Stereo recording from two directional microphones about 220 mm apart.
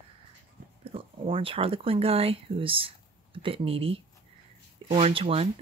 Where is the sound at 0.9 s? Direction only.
25° right (ahead or behind).